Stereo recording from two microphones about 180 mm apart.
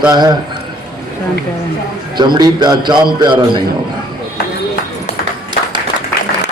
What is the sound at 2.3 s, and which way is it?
A man's voice, 25° right (ahead or behind).